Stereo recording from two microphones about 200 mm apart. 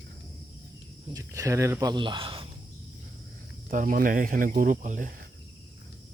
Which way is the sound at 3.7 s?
45° right (ahead or behind).